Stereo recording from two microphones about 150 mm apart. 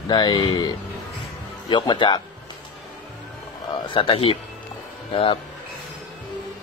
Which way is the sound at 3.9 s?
40° left (ahead or behind).